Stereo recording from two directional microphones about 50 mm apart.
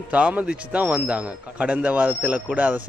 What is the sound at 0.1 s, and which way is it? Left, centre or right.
A man's voice, right.